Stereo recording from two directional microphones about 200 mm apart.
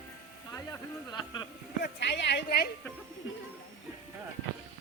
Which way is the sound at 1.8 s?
60° left (ahead or behind).